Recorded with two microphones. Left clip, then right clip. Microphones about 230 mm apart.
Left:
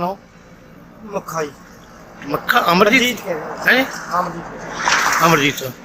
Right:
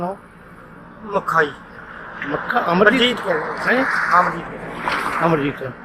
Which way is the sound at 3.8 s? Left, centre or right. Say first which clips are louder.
Right 7 dB; right.